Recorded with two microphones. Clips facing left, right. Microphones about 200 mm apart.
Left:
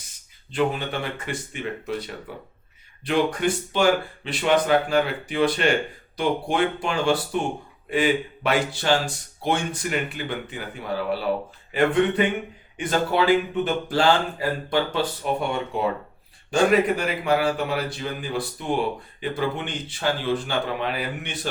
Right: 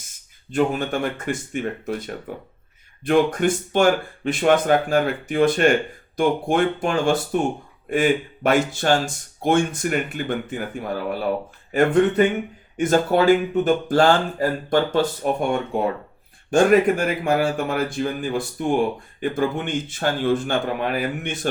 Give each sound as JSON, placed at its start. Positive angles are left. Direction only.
{"t": 0.5, "sound": "speech", "side_deg": -45}